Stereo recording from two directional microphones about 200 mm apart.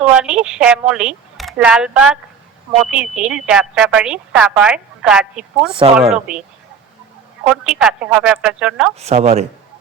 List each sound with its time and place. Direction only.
0.0 s a woman's voice: 5° right (ahead or behind)
7.4 s a woman's voice: 5° right (ahead or behind)
9.0 s speech: 35° right (ahead or behind)